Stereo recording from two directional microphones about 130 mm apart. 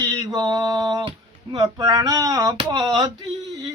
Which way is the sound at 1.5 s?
30° right (ahead or behind).